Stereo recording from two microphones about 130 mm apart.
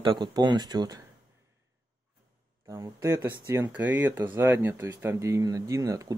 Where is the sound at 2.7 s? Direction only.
20° right (ahead or behind).